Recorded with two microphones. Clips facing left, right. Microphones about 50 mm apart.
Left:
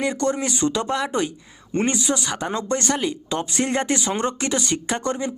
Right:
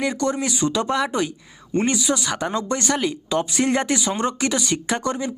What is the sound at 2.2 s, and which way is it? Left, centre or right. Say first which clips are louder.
Speech: right 2 dB; centre.